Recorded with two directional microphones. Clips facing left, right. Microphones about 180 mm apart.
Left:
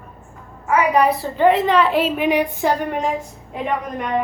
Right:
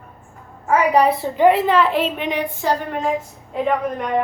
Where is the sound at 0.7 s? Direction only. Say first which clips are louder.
Right 1 dB; 35° right (ahead or behind).